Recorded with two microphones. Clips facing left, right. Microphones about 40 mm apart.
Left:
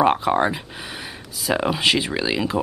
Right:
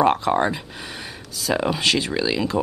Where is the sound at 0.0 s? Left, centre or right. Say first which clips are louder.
Even; centre.